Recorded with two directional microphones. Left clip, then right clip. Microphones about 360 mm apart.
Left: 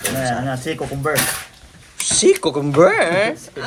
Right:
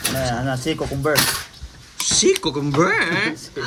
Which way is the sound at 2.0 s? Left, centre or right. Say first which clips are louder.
Left 3 dB; centre.